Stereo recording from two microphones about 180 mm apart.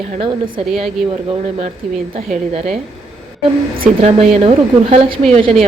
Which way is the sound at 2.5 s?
40° right (ahead or behind).